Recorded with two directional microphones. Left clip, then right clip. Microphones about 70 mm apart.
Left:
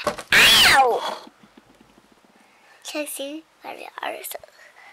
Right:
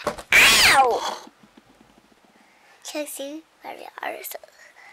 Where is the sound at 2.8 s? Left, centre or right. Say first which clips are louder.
Left 1 dB; centre.